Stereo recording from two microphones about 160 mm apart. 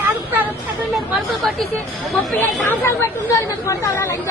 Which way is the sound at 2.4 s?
10° left (ahead or behind).